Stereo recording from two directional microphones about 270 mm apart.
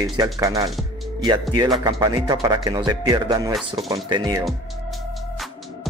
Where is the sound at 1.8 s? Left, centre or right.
Centre.